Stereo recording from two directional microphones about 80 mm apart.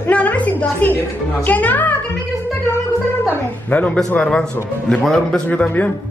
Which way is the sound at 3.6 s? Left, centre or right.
Centre.